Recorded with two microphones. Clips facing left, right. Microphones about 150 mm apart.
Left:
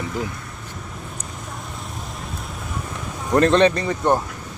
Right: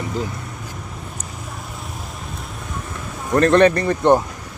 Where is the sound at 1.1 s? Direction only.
5° right (ahead or behind).